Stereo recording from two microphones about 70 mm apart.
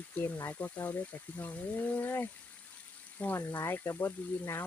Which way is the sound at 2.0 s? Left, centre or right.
Left.